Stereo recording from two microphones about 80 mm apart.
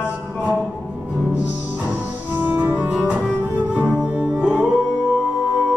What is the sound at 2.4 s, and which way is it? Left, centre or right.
Music, right.